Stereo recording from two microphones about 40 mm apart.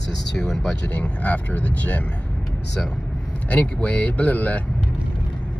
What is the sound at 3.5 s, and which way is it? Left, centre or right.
Speech, left.